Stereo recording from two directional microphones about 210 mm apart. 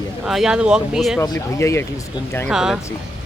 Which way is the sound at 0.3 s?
Centre (ahead or behind).